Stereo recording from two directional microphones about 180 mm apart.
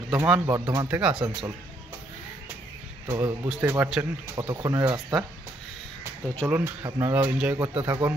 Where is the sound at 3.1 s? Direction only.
20° right (ahead or behind).